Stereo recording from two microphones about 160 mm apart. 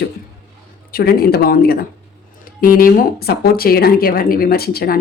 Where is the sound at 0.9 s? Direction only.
70° left (ahead or behind).